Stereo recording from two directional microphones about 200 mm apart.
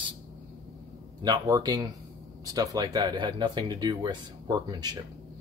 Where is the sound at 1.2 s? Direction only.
20° right (ahead or behind).